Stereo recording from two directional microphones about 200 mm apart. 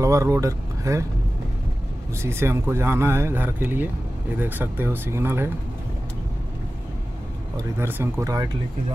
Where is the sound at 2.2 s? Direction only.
15° right (ahead or behind).